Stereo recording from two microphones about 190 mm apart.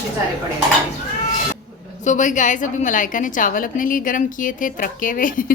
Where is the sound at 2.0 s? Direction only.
40° left (ahead or behind).